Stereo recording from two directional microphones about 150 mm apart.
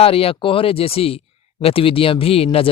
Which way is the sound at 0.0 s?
40° left (ahead or behind).